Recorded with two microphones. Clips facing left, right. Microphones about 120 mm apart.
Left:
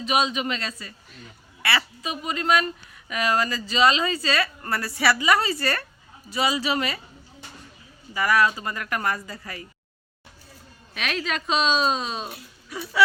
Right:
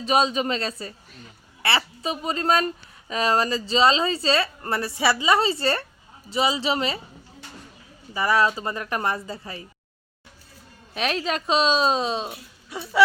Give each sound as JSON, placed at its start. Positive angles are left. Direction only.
{"t": 0.0, "sound": "speech", "side_deg": -35}
{"t": 8.1, "sound": "speech", "side_deg": -25}
{"t": 10.9, "sound": "speech", "side_deg": -35}